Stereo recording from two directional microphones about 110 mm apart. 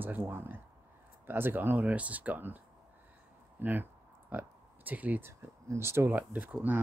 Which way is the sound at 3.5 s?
15° right (ahead or behind).